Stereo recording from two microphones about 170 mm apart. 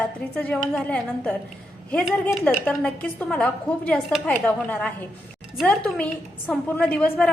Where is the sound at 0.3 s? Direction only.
10° left (ahead or behind).